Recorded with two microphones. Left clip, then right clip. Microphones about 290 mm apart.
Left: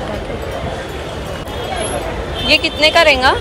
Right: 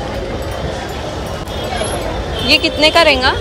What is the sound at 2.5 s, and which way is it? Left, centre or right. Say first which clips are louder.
Speech: right 1 dB; centre.